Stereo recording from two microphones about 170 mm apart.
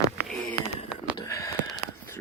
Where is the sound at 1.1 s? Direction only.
20° left (ahead or behind).